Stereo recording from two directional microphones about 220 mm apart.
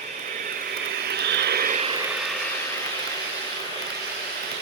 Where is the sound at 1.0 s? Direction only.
50° right (ahead or behind).